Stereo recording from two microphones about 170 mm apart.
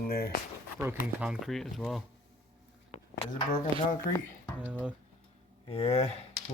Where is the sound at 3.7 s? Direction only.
30° right (ahead or behind).